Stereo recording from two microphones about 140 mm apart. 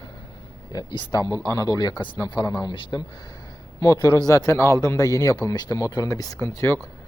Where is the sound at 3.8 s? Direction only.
25° left (ahead or behind).